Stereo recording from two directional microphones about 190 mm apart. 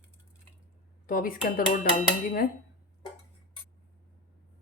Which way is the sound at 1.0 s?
50° left (ahead or behind).